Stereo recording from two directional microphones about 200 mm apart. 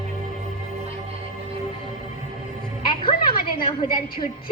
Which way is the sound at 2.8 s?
25° left (ahead or behind).